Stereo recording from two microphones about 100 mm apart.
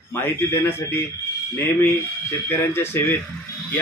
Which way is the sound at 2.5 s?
25° left (ahead or behind).